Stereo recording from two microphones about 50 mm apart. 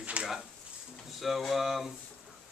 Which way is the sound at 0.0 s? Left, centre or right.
Right.